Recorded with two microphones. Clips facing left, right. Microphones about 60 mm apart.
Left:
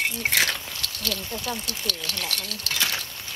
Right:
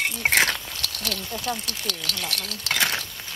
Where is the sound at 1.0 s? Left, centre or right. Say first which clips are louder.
Right 1 dB; centre.